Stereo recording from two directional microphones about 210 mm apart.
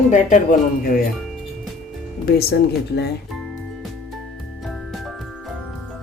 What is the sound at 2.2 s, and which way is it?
Speech, 50° left (ahead or behind).